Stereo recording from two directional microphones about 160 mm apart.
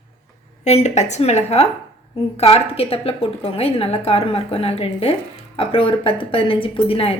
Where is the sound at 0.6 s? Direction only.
45° left (ahead or behind).